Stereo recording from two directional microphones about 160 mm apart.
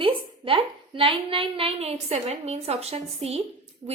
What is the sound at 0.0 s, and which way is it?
A woman's voice, 35° right (ahead or behind).